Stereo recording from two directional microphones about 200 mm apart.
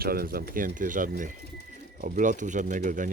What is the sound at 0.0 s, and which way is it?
Speech, 50° right (ahead or behind).